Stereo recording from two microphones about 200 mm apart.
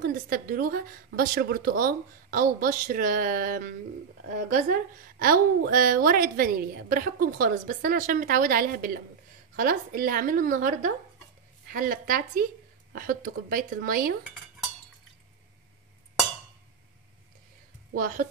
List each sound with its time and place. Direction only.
0.0 s a woman's voice: 45° right (ahead or behind)
17.9 s a woman's voice: 40° right (ahead or behind)